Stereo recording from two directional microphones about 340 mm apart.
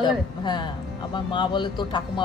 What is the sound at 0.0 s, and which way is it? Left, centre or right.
Speech, centre.